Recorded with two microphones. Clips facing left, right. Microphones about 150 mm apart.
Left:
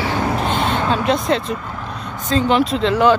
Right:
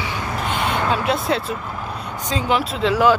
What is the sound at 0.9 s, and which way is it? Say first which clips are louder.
Speech: left 4 dB; 5° right (ahead or behind).